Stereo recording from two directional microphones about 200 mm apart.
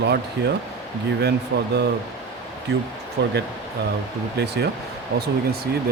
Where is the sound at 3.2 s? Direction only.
55° right (ahead or behind).